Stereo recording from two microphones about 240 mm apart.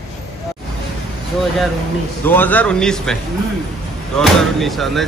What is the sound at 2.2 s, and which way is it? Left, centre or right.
Speech, centre.